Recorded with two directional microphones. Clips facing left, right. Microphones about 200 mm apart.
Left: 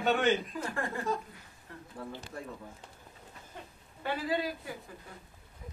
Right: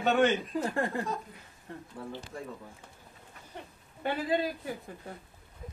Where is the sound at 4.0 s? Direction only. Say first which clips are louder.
Right 3 dB; 25° right (ahead or behind).